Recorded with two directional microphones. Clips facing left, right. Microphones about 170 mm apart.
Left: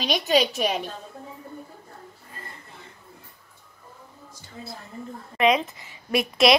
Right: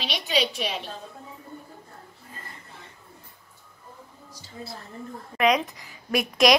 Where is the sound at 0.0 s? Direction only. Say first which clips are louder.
Left 5 dB; 45° left (ahead or behind).